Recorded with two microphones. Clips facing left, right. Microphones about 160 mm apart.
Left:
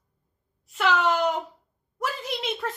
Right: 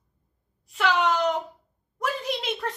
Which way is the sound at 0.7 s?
Centre (ahead or behind).